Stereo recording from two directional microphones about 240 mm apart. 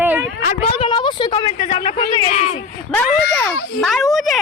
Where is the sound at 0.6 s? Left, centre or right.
Left.